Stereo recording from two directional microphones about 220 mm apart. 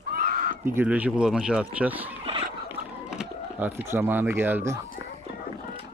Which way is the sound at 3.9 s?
10° right (ahead or behind).